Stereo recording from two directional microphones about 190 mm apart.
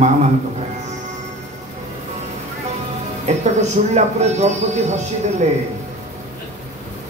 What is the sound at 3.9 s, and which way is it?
Speech, 35° right (ahead or behind).